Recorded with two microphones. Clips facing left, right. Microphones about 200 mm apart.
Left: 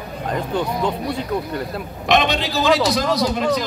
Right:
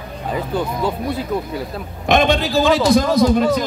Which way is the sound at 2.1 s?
50° right (ahead or behind).